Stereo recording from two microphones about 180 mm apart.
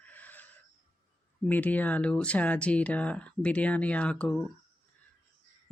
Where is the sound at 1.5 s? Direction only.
10° left (ahead or behind).